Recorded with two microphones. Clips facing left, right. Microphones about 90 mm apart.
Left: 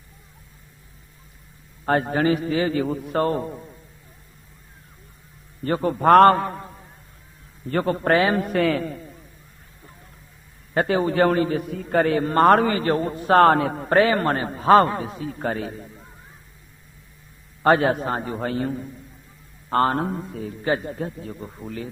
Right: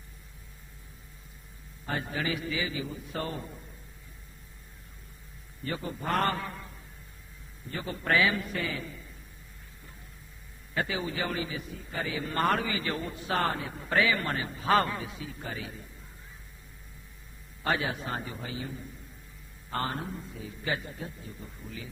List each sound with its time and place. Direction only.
1.8 s a man's voice: 55° left (ahead or behind)
5.6 s a man's voice: 55° left (ahead or behind)
7.7 s a man's voice: 60° left (ahead or behind)
10.8 s a man's voice: 50° left (ahead or behind)
13.4 s a man's voice: 75° left (ahead or behind); by 15.9 s 50° left (ahead or behind)
17.6 s a man's voice: 50° left (ahead or behind)
20.7 s a man's voice: 45° left (ahead or behind)
21.2 s speech: 75° left (ahead or behind)
21.4 s a man's voice: 55° left (ahead or behind)